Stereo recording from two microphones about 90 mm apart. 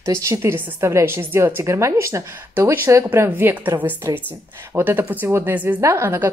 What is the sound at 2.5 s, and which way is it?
Speech, 25° right (ahead or behind).